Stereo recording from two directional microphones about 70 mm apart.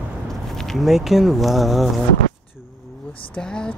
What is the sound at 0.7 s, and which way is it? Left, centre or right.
Speech, centre.